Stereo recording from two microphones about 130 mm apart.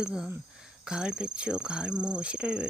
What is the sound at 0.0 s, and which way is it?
Speech, 5° right (ahead or behind).